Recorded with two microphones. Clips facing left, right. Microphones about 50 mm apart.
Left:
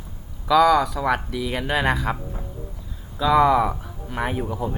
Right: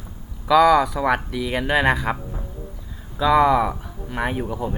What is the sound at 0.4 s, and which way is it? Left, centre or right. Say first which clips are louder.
Speech: right 2 dB; centre.